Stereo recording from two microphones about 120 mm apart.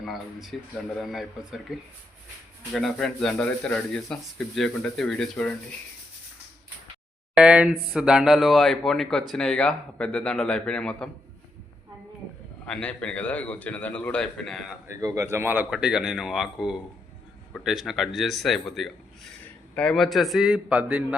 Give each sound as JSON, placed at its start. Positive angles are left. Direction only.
{"t": 0.0, "sound": "speech", "side_deg": 0}
{"t": 2.7, "sound": "speech", "side_deg": 5}
{"t": 7.3, "sound": "speech", "side_deg": -10}
{"t": 12.6, "sound": "a man's voice", "side_deg": 10}
{"t": 14.8, "sound": "speech", "side_deg": -25}
{"t": 15.7, "sound": "speech", "side_deg": -5}